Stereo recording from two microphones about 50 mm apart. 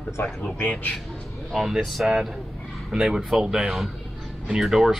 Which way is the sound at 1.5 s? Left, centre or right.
Centre.